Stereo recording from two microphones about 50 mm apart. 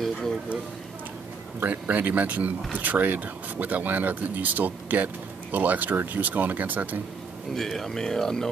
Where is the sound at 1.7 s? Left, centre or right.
Right.